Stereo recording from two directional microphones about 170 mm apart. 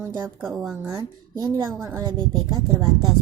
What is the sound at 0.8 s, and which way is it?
A woman's voice, 20° right (ahead or behind).